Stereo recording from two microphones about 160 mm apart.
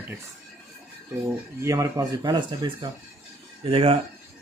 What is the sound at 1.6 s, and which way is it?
A man's voice, 20° right (ahead or behind).